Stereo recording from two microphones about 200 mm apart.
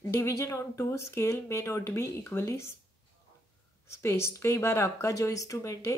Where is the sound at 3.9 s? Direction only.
15° left (ahead or behind).